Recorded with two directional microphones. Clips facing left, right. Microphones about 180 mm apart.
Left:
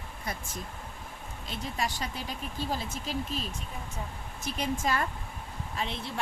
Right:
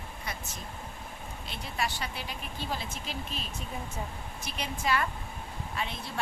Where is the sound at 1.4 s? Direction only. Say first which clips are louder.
Left 1 dB; 40° left (ahead or behind).